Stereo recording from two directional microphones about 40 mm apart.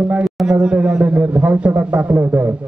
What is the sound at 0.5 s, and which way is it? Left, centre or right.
A man's voice, right.